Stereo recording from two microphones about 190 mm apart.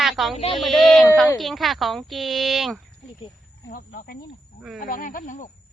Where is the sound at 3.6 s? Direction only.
50° left (ahead or behind).